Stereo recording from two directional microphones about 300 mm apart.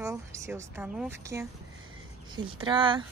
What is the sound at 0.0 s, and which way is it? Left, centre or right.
Speech, centre.